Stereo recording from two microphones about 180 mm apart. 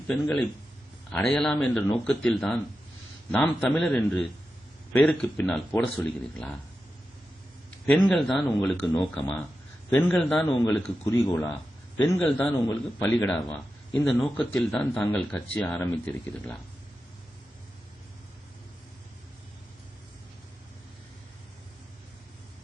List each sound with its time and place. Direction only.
0.1 s speech: 5° left (ahead or behind)
7.9 s speech: 5° left (ahead or behind)
10.7 s speech: 15° left (ahead or behind)